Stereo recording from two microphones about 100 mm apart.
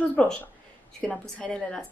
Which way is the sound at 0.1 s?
15° left (ahead or behind).